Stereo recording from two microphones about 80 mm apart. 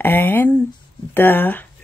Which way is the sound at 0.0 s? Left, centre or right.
Left.